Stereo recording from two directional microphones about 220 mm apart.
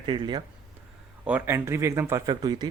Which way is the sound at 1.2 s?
10° right (ahead or behind).